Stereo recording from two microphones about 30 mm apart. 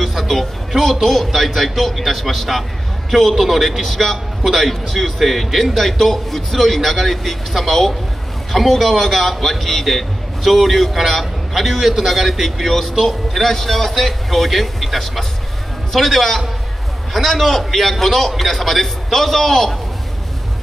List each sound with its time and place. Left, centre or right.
0.0 s a man's voice: centre